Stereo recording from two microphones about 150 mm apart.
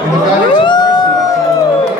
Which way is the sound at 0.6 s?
30° left (ahead or behind).